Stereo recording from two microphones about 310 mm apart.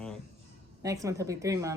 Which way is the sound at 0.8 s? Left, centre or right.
Centre.